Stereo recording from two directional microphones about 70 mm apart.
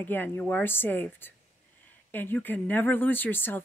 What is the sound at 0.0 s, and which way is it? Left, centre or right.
Speech, left.